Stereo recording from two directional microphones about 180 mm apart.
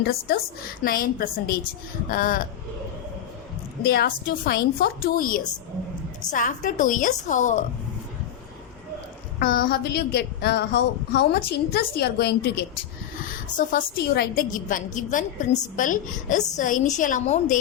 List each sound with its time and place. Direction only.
0.0 s a woman's voice: 60° left (ahead or behind)
3.8 s a woman's voice: 60° left (ahead or behind)
9.4 s a woman's voice: 55° left (ahead or behind)
13.6 s a woman's voice: 50° left (ahead or behind)